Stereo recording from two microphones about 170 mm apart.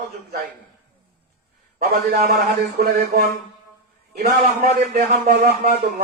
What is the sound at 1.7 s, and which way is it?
A man's voice, 60° right (ahead or behind).